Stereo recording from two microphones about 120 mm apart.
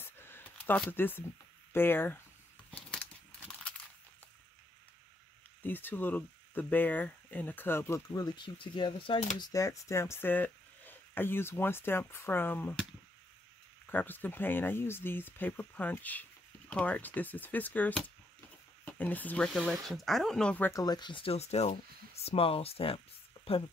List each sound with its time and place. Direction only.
0.0 s a sound: 20° left (ahead or behind)
0.8 s speech: 15° left (ahead or behind)
5.6 s speech: 15° left (ahead or behind); by 9.2 s 45° left (ahead or behind)
9.4 s speech: 30° left (ahead or behind)
13.8 s speech: 15° left (ahead or behind)
20.7 s speech: 35° left (ahead or behind); by 23.6 s 55° left (ahead or behind)